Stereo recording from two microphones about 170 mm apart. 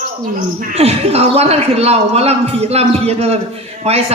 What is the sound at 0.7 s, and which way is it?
A man's voice, 40° right (ahead or behind).